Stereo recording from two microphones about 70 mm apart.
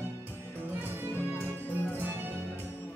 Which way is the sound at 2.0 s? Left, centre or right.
Right.